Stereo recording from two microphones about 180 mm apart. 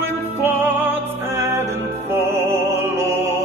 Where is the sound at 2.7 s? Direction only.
15° right (ahead or behind).